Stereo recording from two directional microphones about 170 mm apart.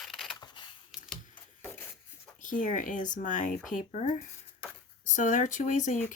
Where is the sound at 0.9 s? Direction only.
Centre (ahead or behind).